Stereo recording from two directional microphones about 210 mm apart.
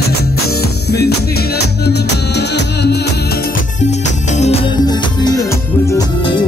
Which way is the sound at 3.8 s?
35° left (ahead or behind).